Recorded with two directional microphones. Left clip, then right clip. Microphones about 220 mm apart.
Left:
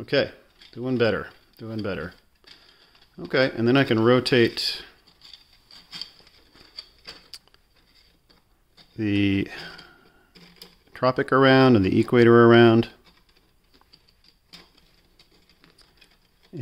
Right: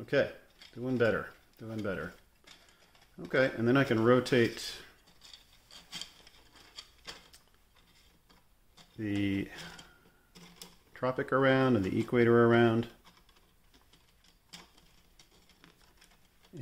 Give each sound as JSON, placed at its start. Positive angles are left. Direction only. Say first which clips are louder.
{"t": 0.0, "sound": "speech", "louder": "left 6 dB", "side_deg": 45}
{"t": 3.3, "sound": "speech", "louder": "left 7 dB", "side_deg": 45}
{"t": 5.7, "sound": "a sound", "louder": "left 6 dB", "side_deg": 5}
{"t": 8.9, "sound": "speech", "louder": "left 10 dB", "side_deg": 50}
{"t": 10.9, "sound": "speech", "louder": "left 10 dB", "side_deg": 50}